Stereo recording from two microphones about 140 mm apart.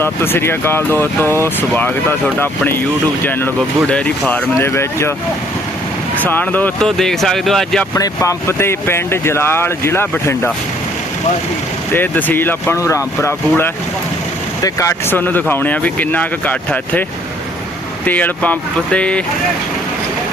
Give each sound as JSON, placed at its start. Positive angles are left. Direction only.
{"t": 0.0, "sound": "speech", "side_deg": 15}
{"t": 6.2, "sound": "speech", "side_deg": 10}
{"t": 7.9, "sound": "speech", "side_deg": 25}
{"t": 11.9, "sound": "speech", "side_deg": 15}